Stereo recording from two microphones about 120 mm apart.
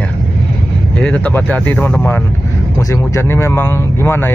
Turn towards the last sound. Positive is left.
turn(degrees=20)  # may be behind; listen again after turning